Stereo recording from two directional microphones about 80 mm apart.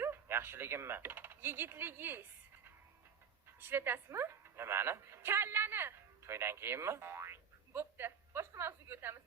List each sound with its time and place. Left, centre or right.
0.0 s speech: right
3.6 s a woman's voice: right